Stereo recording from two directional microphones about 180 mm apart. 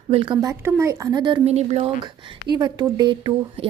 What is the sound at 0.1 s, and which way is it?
Speech, 25° right (ahead or behind).